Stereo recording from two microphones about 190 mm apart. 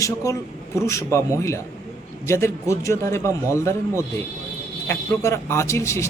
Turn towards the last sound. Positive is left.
turn(degrees=15)  # may be behind; listen again after turning